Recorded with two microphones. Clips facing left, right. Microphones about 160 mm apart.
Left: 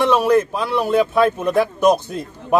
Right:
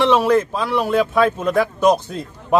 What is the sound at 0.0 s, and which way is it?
A man's voice, 15° left (ahead or behind).